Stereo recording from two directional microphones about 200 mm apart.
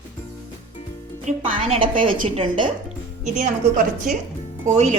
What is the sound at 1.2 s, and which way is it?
A woman's voice, 35° right (ahead or behind).